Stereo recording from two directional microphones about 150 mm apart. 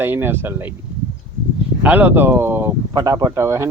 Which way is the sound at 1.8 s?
10° right (ahead or behind).